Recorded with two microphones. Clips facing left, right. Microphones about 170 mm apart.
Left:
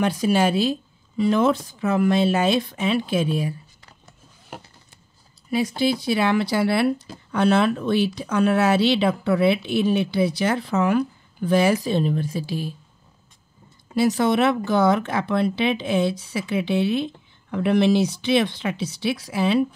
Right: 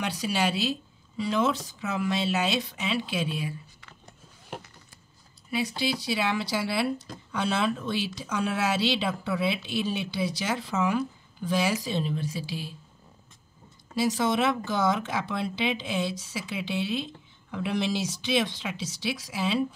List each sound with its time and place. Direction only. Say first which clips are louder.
0.0 s speech: left 8 dB; 50° left (ahead or behind)
5.5 s speech: left 7 dB; 45° left (ahead or behind)
13.9 s speech: left 6 dB; 60° left (ahead or behind)